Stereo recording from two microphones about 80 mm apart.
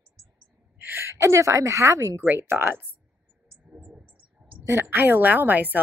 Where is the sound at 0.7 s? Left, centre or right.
Right.